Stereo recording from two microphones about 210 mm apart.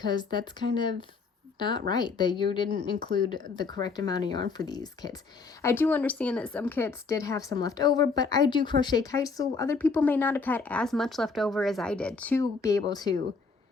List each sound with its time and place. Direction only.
0.0 s a woman's voice: 20° left (ahead or behind)